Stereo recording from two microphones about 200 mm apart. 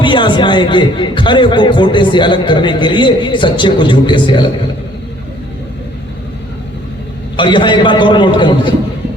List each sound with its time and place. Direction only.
0.0 s a man's voice: 25° left (ahead or behind)
7.3 s a man's voice: 25° left (ahead or behind)